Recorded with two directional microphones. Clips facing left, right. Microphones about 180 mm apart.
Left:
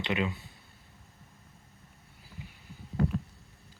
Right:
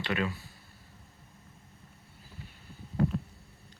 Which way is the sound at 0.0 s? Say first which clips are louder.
Left 1 dB; 20° left (ahead or behind).